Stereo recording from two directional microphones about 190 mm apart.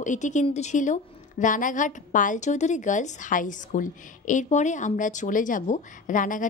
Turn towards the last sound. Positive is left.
turn(degrees=45)  # may be behind; listen again after turning